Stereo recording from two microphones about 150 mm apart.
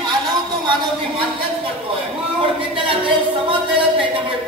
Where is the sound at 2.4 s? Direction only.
35° right (ahead or behind).